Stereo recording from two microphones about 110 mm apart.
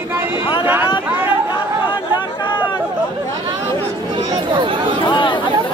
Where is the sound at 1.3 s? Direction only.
50° left (ahead or behind).